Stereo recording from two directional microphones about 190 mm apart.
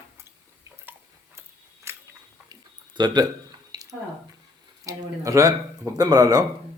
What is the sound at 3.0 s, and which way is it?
Speech, 20° right (ahead or behind).